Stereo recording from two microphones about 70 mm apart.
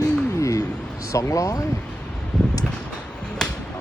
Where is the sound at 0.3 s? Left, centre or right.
Left.